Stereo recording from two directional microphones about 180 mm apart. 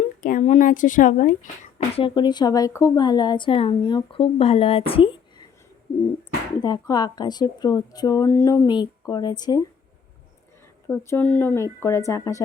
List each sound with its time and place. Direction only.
0.2 s speech: 45° left (ahead or behind)
2.0 s a woman's voice: 25° left (ahead or behind)
6.6 s a woman's voice: 25° left (ahead or behind)
10.8 s speech: 15° left (ahead or behind)